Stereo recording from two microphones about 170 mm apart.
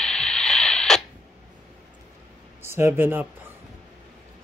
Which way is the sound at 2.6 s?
15° right (ahead or behind).